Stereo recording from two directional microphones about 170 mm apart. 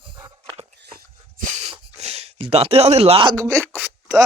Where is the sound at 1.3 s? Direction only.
40° right (ahead or behind).